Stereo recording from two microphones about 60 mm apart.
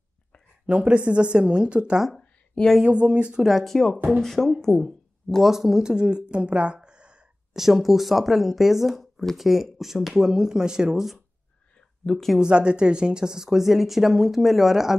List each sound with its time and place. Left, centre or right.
0.7 s speech: centre
3.4 s a woman's voice: centre
5.5 s speech: centre
7.5 s speech: centre
12.4 s speech: centre